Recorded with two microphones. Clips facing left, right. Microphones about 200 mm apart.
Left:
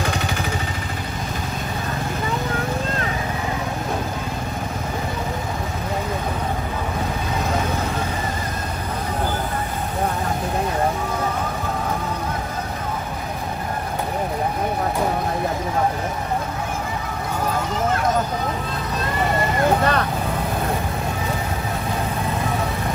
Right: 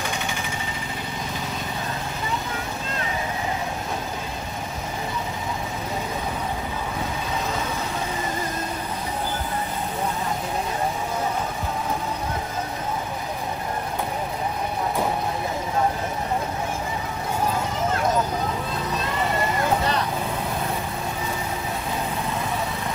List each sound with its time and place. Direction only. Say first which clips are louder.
19.8 s vehicle: left 4 dB; 60° left (ahead or behind)